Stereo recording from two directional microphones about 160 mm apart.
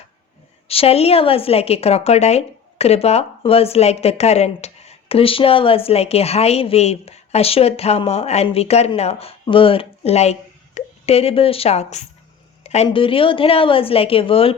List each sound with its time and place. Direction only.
0.7 s a woman's voice: 40° left (ahead or behind)